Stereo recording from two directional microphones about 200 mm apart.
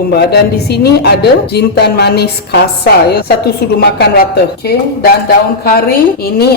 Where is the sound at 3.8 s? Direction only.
50° left (ahead or behind).